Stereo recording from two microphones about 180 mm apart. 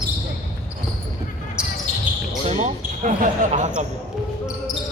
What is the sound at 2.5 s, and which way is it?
Basketball bounce, 45° right (ahead or behind).